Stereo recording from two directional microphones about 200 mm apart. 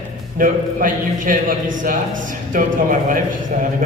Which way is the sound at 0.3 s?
45° right (ahead or behind).